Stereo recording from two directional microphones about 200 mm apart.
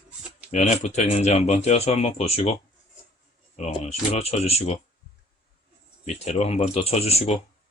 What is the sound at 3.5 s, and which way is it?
Speech, 30° left (ahead or behind).